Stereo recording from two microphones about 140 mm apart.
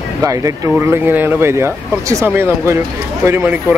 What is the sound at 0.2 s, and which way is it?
Speech, 25° right (ahead or behind).